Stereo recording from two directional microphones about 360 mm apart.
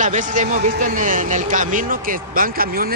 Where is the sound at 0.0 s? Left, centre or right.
Right.